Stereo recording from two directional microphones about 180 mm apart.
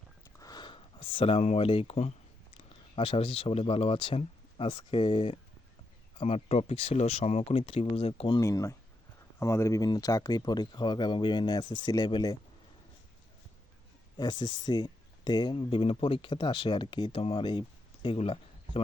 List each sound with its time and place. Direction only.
0.3 s speech: 20° left (ahead or behind)
8.4 s speech: 15° left (ahead or behind)
14.2 s speech: 25° left (ahead or behind)